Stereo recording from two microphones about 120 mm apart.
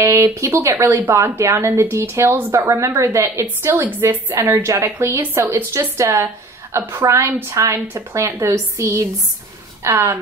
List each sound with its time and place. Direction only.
0.0 s a woman's voice: 25° right (ahead or behind)